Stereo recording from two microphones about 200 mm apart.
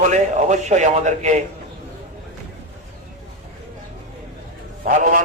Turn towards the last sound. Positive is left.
turn(degrees=-40)  # may be behind; listen again after turning